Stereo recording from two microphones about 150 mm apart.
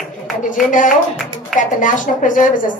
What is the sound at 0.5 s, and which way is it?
A woman's voice, 60° left (ahead or behind).